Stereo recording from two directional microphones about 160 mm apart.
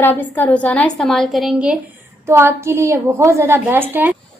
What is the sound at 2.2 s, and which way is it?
A woman's voice, 15° right (ahead or behind).